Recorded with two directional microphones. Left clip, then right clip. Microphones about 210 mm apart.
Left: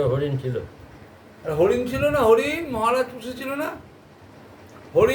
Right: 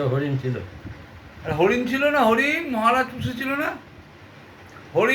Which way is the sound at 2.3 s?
20° left (ahead or behind).